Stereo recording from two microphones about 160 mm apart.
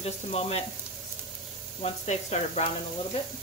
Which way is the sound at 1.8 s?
45° left (ahead or behind).